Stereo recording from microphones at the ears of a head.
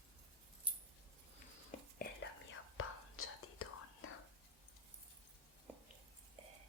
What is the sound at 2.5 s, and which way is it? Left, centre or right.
Whispering, left.